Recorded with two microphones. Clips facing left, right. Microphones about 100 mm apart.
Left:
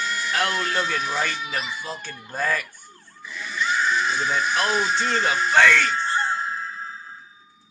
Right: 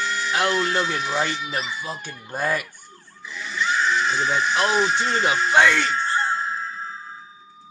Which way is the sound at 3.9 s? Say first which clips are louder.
Right 1 dB; 25° right (ahead or behind).